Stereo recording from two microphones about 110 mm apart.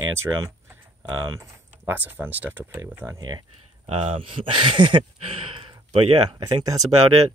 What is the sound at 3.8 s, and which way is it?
Speech, 60° right (ahead or behind).